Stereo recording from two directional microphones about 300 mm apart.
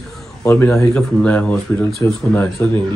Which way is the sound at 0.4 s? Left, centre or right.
Centre.